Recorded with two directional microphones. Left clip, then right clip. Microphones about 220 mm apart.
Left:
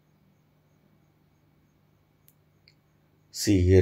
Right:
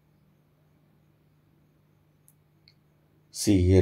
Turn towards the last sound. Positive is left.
turn(degrees=-15)  # may be behind; listen again after turning